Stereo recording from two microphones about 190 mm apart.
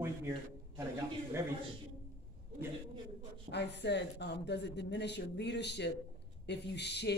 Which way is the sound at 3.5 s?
65° left (ahead or behind).